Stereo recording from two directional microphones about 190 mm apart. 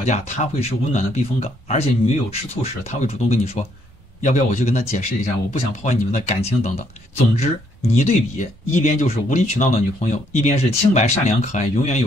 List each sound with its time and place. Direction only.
0.0 s speech: 35° left (ahead or behind)